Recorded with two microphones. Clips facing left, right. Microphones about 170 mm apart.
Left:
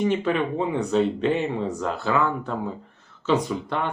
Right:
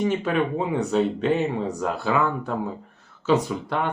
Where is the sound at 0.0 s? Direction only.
5° right (ahead or behind).